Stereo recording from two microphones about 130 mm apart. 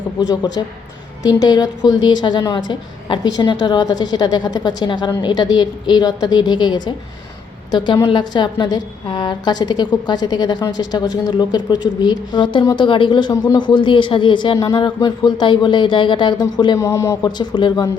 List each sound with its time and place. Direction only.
0.2 s a woman's voice: 30° left (ahead or behind)
16.7 s a man's voice: 25° left (ahead or behind)
17.2 s a woman's voice: 35° left (ahead or behind)